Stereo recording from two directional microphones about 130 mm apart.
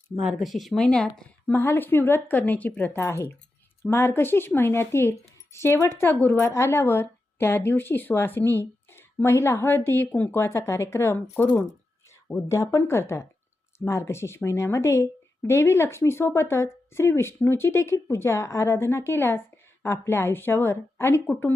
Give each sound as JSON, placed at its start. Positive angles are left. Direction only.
{"t": 0.2, "sound": "speech", "side_deg": 0}